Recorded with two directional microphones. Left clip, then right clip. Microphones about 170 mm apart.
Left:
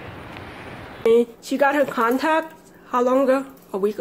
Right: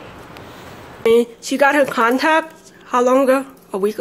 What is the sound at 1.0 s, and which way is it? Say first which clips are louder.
Speech: right 3 dB; 10° right (ahead or behind).